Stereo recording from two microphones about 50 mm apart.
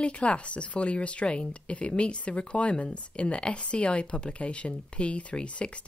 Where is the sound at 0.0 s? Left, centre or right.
Left.